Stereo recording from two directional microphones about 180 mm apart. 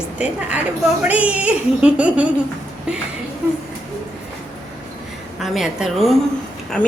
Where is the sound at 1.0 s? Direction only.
5° right (ahead or behind).